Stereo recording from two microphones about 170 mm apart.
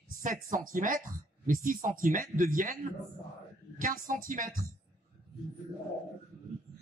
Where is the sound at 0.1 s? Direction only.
50° right (ahead or behind).